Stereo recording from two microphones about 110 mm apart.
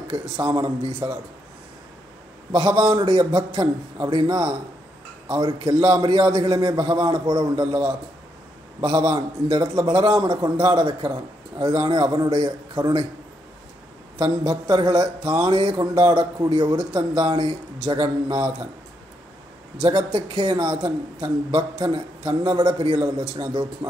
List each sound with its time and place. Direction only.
0.1 s a man's voice: 35° right (ahead or behind)
2.5 s a man's voice: 40° right (ahead or behind)
11.1 s speech: 35° right (ahead or behind)
11.7 s a man's voice: 45° right (ahead or behind)
14.1 s a man's voice: 40° right (ahead or behind)
20.1 s a man's voice: 50° right (ahead or behind)